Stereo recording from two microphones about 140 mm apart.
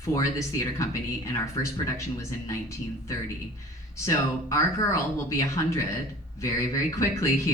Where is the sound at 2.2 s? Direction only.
20° left (ahead or behind).